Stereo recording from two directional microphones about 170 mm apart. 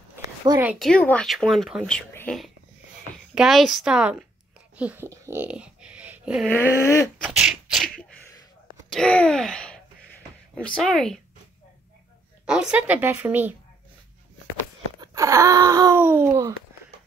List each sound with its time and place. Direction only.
0.6 s a woman's voice: 10° right (ahead or behind)
0.8 s speech: 5° left (ahead or behind)
6.5 s dog: 15° left (ahead or behind)
7.2 s sneeze: 5° right (ahead or behind)
8.9 s speech: 5° left (ahead or behind)
12.4 s a woman's voice: 5° right (ahead or behind)
15.0 s wail: 20° right (ahead or behind)